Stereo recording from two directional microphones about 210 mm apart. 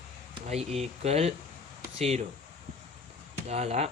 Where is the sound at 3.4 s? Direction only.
30° right (ahead or behind).